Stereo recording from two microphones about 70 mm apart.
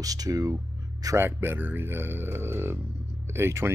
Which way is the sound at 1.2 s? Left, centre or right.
Right.